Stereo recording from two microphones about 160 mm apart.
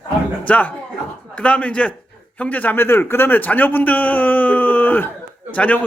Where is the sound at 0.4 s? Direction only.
10° left (ahead or behind).